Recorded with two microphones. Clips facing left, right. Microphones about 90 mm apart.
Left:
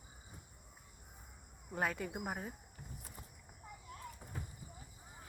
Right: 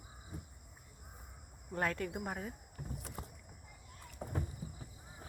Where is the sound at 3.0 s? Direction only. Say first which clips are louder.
Right 7 dB; 80° right.